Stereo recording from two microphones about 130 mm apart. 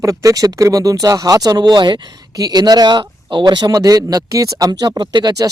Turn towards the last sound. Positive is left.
turn(degrees=-30)  # may be behind; listen again after turning